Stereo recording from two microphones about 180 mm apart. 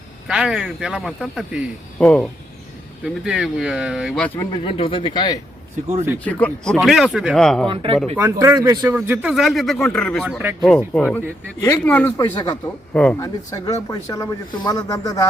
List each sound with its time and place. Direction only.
0.3 s speech: 5° right (ahead or behind)
4.4 s speech: 25° left (ahead or behind)
6.2 s speech: 5° left (ahead or behind)
7.7 s speech: 30° right (ahead or behind)
8.1 s speech: 10° right (ahead or behind)
9.0 s speech: 10° right (ahead or behind)
10.2 s speech: 5° right (ahead or behind)
11.6 s speech: 15° left (ahead or behind)
12.4 s speech: 20° left (ahead or behind)
12.9 s speech: 5° left (ahead or behind)
13.2 s speech: 20° left (ahead or behind)